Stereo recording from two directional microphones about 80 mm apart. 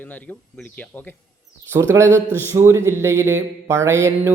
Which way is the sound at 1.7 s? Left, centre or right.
Right.